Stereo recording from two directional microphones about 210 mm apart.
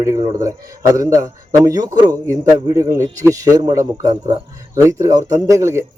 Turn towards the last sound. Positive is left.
turn(degrees=-15)  # may be behind; listen again after turning